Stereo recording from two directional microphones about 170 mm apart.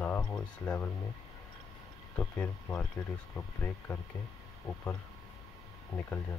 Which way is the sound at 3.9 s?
5° left (ahead or behind).